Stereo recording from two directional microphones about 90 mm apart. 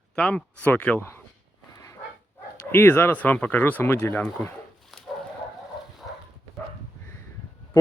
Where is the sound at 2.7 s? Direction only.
25° left (ahead or behind).